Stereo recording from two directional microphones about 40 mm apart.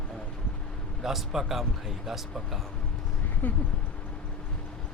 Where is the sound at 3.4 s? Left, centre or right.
Left.